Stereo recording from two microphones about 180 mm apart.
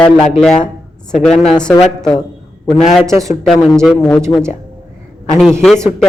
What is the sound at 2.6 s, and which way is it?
Speech, 40° left (ahead or behind).